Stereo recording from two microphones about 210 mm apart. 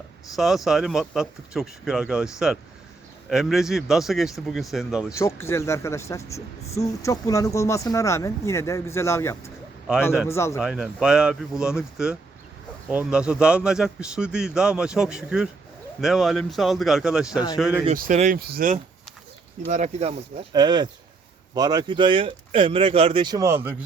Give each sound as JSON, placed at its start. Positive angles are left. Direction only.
{"t": 0.3, "sound": "a man's voice", "side_deg": 0}
{"t": 5.1, "sound": "speech", "side_deg": 15}
{"t": 10.6, "sound": "a man's voice", "side_deg": -5}
{"t": 17.8, "sound": "speech", "side_deg": -40}
{"t": 19.6, "sound": "speech", "side_deg": -35}